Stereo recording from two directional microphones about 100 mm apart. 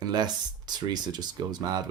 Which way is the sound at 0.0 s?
45° right (ahead or behind).